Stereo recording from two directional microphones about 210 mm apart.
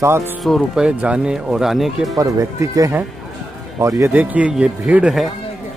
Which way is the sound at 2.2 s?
15° right (ahead or behind).